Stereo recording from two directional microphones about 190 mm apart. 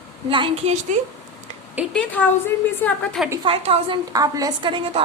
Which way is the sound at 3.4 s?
30° right (ahead or behind).